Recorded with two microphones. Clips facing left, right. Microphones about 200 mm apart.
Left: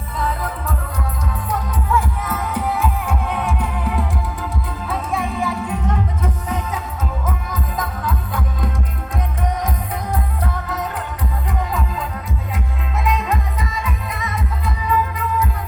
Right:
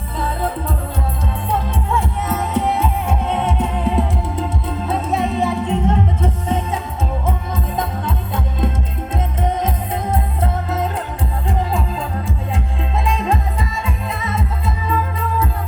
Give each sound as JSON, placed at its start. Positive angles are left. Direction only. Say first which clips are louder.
{"t": 0.2, "sound": "music", "louder": "right 2 dB", "side_deg": -30}
{"t": 13.1, "sound": "music", "louder": "even", "side_deg": -30}